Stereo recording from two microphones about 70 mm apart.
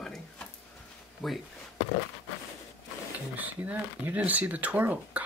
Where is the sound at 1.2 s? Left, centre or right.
Centre.